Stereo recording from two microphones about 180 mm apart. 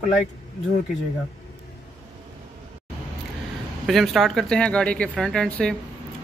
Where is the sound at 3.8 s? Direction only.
Centre (ahead or behind).